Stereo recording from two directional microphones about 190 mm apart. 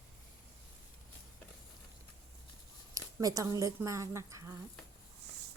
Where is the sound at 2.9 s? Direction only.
20° right (ahead or behind).